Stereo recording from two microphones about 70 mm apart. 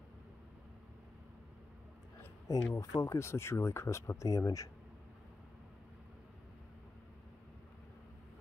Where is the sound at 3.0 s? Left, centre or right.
Left.